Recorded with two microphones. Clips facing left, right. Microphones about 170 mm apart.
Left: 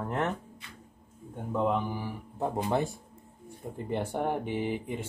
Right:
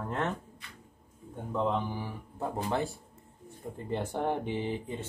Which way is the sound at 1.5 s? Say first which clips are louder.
Left 2 dB; 10° left (ahead or behind).